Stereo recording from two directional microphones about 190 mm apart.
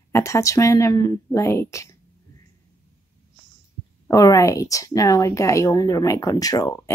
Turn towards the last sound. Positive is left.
turn(degrees=20)  # may be behind; listen again after turning